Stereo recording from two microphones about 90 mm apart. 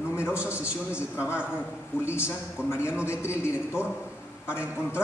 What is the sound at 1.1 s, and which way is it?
Speech, 30° left (ahead or behind).